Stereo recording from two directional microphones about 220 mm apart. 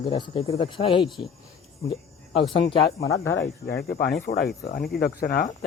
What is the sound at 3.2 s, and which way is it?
Speech, 55° left (ahead or behind).